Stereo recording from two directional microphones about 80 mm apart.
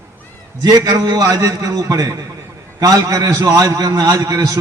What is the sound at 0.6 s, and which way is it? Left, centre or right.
A man's voice, right.